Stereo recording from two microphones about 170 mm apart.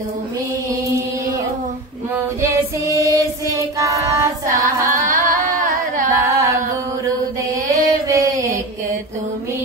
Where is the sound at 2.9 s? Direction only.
20° right (ahead or behind).